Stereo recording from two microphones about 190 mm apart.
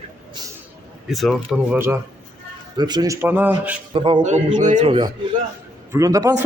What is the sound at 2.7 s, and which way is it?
A man's voice, 20° right (ahead or behind).